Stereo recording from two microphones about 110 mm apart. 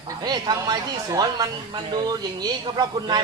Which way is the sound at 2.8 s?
40° right (ahead or behind).